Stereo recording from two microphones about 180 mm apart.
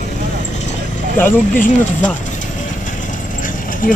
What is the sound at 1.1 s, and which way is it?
Speech, 10° left (ahead or behind).